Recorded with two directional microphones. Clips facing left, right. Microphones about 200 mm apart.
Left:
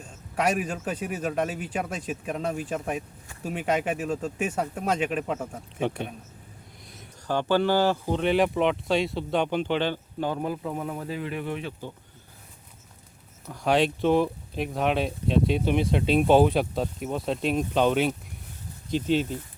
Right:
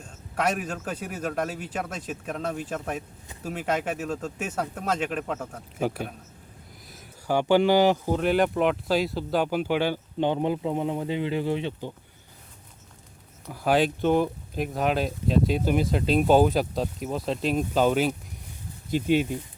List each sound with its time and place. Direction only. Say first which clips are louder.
0.0 s speech: left 1 dB; 5° left (ahead or behind)
5.8 s speech: even; 5° right (ahead or behind)
8.2 s speech: left 1 dB; centre (ahead or behind)
10.2 s speech: right 6 dB; 25° right (ahead or behind)
13.5 s speech: even; 5° right (ahead or behind)